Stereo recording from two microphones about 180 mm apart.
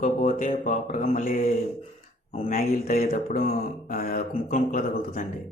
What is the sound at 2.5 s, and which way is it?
Mantra, 55° left (ahead or behind).